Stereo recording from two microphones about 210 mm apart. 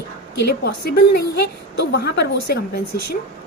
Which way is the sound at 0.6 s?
50° left (ahead or behind).